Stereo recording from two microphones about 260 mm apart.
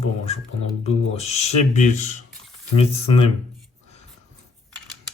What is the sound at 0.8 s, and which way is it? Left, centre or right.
Speech, left.